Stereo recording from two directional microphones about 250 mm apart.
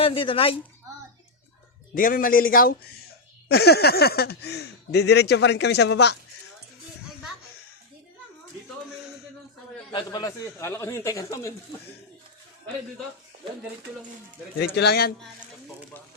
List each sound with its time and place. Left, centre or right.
0.0 s speech: left
2.0 s speech: left
9.9 s speech: centre
14.6 s speech: left